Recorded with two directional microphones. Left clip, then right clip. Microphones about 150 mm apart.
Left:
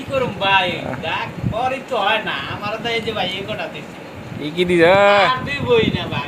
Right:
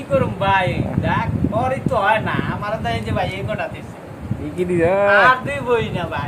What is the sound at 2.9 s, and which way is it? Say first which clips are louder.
Speech: left 2 dB; centre (ahead or behind).